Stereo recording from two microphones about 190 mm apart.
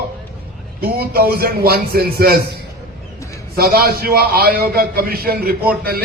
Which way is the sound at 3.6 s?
55° right (ahead or behind).